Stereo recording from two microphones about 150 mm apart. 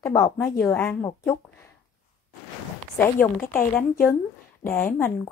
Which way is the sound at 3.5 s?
15° left (ahead or behind).